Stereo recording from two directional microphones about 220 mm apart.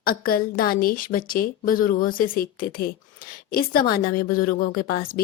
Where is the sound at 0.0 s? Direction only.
40° left (ahead or behind).